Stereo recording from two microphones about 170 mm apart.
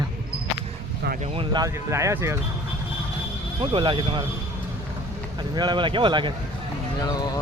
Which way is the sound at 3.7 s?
30° right (ahead or behind).